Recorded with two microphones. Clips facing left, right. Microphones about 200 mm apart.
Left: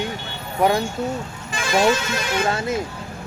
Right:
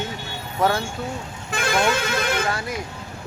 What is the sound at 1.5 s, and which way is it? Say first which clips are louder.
Speech: left 3 dB; 60° right (ahead or behind).